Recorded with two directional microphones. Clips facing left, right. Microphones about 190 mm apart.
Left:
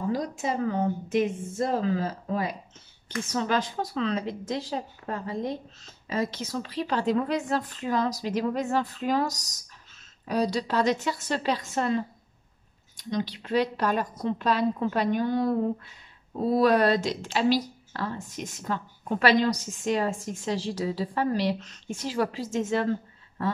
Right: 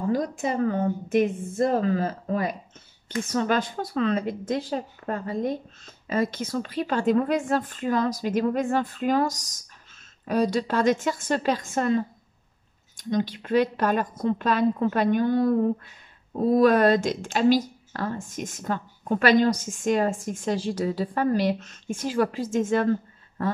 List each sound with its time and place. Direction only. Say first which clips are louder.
0.1 s a woman's voice: right 5 dB; 50° right (ahead or behind)